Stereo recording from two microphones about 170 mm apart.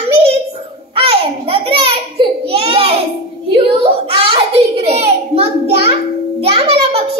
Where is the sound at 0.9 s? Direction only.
35° right (ahead or behind).